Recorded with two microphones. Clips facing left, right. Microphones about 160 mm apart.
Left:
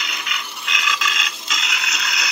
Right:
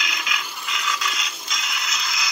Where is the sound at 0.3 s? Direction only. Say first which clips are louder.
Even; 85° left.